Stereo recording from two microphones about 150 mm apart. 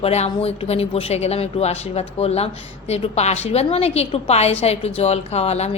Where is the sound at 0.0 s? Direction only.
45° left (ahead or behind).